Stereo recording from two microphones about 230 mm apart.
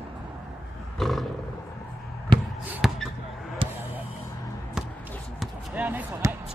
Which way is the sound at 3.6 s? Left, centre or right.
Right.